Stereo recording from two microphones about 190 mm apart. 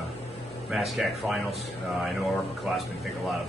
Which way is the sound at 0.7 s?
Centre (ahead or behind).